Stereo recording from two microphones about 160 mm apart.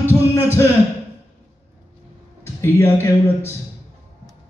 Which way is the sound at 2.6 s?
15° left (ahead or behind).